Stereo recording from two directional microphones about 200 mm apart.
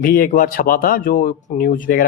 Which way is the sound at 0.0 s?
45° left (ahead or behind).